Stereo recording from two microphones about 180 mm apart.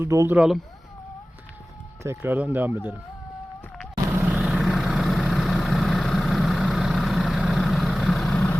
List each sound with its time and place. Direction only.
0.0 s speech: 15° right (ahead or behind)
0.3 s speech: centre (ahead or behind)
2.0 s speech: 10° right (ahead or behind)
4.1 s vehicle: 5° right (ahead or behind)